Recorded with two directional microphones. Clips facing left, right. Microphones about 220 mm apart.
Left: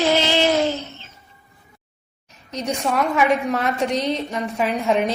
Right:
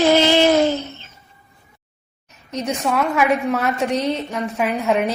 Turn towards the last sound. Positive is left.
turn(degrees=-5)  # may be behind; listen again after turning